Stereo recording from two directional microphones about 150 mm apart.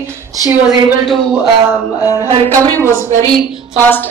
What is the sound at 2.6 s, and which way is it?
Speech, 20° right (ahead or behind).